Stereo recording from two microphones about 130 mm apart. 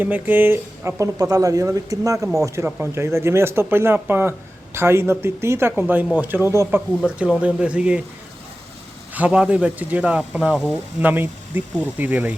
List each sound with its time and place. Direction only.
0.0 s speech: 15° right (ahead or behind)
2.6 s a man's voice: 15° right (ahead or behind)
7.0 s a man's voice: 10° right (ahead or behind)
9.1 s a man's voice: 10° right (ahead or behind)